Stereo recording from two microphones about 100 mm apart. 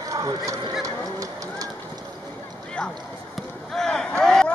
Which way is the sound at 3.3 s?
5° left (ahead or behind).